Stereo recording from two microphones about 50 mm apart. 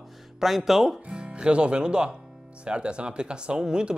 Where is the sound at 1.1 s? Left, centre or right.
Right.